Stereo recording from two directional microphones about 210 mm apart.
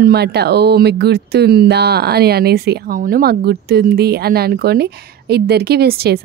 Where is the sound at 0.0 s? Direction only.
50° right (ahead or behind).